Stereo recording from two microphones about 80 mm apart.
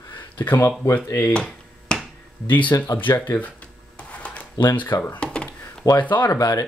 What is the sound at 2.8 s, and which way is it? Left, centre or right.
Speech, left.